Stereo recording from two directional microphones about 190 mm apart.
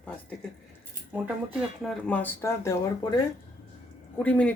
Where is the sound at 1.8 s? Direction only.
10° left (ahead or behind).